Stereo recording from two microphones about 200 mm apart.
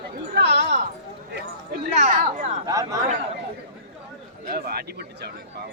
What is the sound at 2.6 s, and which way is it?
Speech, 15° right (ahead or behind).